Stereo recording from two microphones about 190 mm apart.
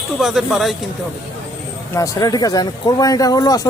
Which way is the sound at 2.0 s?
20° left (ahead or behind).